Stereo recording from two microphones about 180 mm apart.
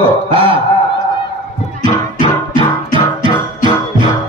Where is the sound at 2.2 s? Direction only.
30° right (ahead or behind).